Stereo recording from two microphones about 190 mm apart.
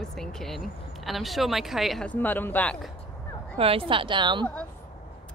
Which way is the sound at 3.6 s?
30° right (ahead or behind).